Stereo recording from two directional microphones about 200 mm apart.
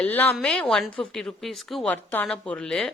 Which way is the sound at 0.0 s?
10° left (ahead or behind).